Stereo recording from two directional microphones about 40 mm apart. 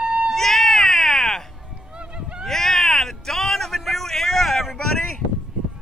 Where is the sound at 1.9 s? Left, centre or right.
Right.